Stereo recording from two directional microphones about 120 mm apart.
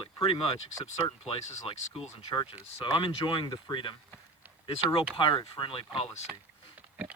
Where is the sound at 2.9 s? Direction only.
45° left (ahead or behind).